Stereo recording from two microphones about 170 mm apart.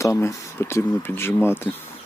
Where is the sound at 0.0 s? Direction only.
20° left (ahead or behind).